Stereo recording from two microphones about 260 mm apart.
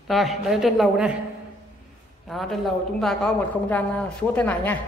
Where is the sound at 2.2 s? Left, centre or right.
Centre.